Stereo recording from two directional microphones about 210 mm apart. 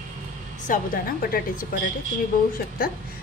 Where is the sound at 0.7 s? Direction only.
40° left (ahead or behind).